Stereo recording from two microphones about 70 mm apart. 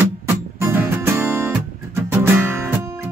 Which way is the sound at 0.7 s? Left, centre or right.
Right.